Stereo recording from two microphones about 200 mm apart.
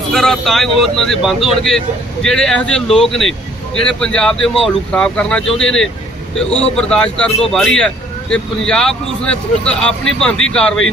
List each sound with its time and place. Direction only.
0.1 s speech: 5° left (ahead or behind)